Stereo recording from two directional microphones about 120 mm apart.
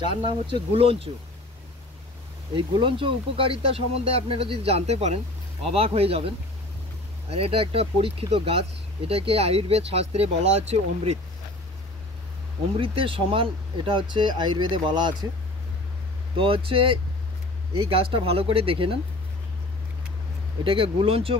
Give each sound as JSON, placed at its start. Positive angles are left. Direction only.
{"t": 0.0, "sound": "speech", "side_deg": -40}
{"t": 2.5, "sound": "speech", "side_deg": -45}
{"t": 12.7, "sound": "speech", "side_deg": -50}
{"t": 16.3, "sound": "speech", "side_deg": -50}
{"t": 20.6, "sound": "speech", "side_deg": -50}